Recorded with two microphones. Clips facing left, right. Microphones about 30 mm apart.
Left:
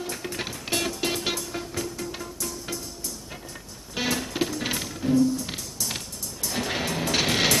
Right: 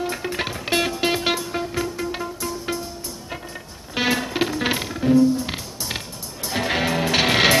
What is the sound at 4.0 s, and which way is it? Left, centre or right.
Music, right.